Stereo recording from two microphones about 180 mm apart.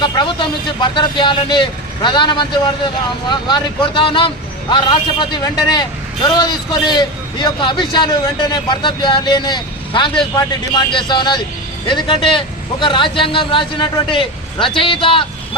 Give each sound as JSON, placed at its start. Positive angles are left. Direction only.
{"t": 0.0, "sound": "speech", "side_deg": 25}